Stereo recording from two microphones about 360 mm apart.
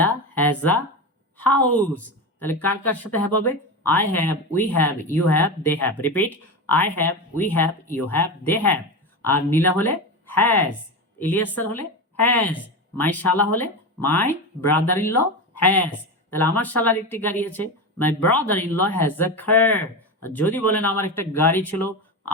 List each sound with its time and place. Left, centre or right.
0.0 s a sound: centre
1.9 s speech: left
2.4 s speech: centre
21.6 s speech: left